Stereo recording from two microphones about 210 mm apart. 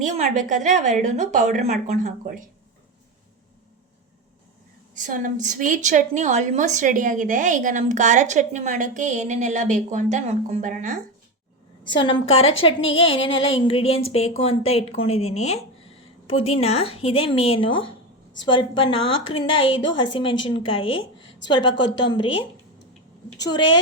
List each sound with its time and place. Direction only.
0.0 s a woman's voice: 35° right (ahead or behind)
4.9 s a woman's voice: 40° right (ahead or behind)
11.8 s a woman's voice: 20° left (ahead or behind)